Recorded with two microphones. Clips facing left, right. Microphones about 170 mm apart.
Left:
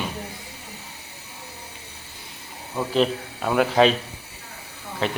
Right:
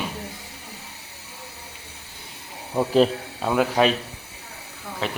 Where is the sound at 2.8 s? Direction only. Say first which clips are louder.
Right 3 dB; 40° right (ahead or behind).